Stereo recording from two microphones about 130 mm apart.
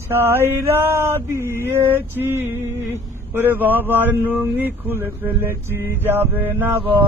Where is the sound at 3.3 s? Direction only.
15° right (ahead or behind).